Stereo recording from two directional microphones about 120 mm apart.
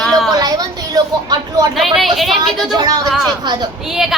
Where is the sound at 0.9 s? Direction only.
30° right (ahead or behind).